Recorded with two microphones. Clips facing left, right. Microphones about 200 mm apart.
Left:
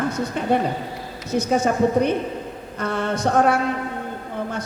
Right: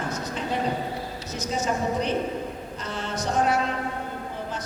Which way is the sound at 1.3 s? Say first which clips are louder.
Left 8 dB; 55° left (ahead or behind).